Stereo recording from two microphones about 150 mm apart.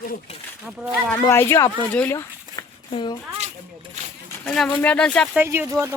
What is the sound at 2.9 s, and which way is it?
Speech, 30° left (ahead or behind).